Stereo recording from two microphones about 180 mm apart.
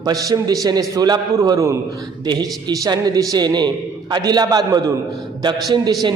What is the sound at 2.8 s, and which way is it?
A man's voice, 20° right (ahead or behind).